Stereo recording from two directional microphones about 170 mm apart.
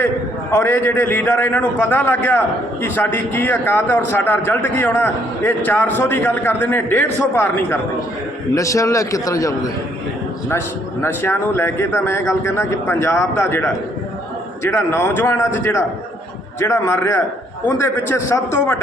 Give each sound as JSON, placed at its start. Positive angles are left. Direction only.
{"t": 0.5, "sound": "a man's voice", "side_deg": 10}
{"t": 11.0, "sound": "a man's voice", "side_deg": 15}